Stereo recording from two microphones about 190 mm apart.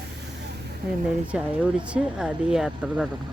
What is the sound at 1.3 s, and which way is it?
Speech, 5° right (ahead or behind).